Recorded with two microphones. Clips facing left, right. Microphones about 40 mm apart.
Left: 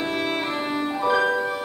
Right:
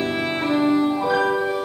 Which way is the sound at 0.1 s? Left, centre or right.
Centre.